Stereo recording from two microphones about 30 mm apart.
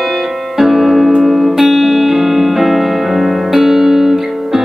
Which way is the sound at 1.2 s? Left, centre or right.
Centre.